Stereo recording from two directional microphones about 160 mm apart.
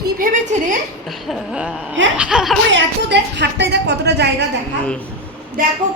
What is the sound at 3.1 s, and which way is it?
A woman's voice, 90° right.